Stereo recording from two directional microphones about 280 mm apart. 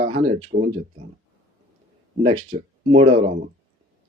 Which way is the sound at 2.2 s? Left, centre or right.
Centre.